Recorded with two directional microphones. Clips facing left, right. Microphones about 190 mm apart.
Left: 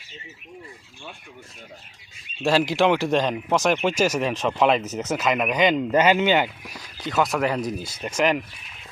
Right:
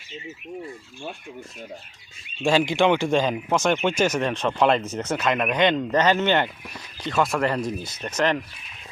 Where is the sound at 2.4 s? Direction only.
5° left (ahead or behind).